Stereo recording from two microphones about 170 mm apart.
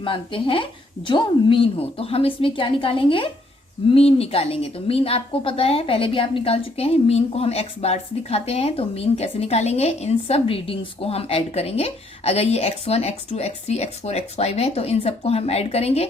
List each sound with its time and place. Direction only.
0.0 s a woman's voice: 30° left (ahead or behind)